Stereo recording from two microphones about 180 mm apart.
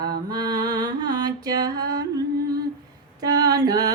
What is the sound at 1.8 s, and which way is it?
Music, 55° right (ahead or behind).